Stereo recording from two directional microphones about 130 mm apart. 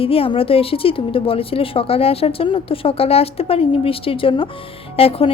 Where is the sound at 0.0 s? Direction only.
45° left (ahead or behind).